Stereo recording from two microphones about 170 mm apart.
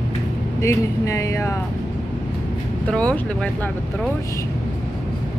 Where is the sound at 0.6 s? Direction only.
20° left (ahead or behind).